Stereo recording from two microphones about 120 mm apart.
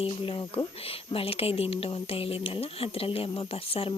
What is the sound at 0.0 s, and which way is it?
Speech, 50° left (ahead or behind).